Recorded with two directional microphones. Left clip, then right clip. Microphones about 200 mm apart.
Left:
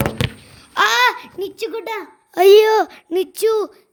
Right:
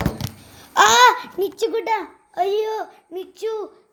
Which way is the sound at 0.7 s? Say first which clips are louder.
Right 2 dB; 30° left (ahead or behind).